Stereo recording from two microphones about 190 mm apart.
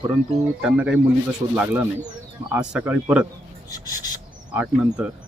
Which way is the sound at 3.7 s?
20° left (ahead or behind).